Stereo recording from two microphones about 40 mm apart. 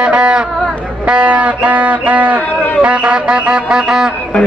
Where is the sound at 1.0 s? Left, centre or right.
Right.